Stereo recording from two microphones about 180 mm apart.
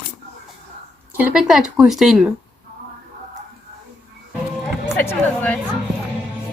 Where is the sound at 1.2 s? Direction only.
5° right (ahead or behind).